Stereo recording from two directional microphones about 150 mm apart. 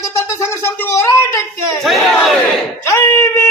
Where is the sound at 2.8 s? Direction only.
20° left (ahead or behind).